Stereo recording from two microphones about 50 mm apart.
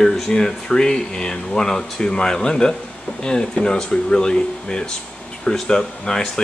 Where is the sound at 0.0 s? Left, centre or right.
Centre.